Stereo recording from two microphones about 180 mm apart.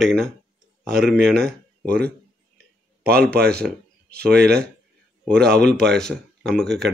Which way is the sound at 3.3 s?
65° right (ahead or behind).